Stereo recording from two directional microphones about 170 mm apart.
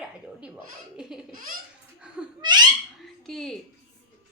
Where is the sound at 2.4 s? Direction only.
25° right (ahead or behind).